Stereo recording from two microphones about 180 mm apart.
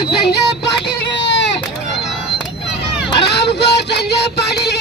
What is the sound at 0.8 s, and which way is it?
Vehicle, 75° left (ahead or behind).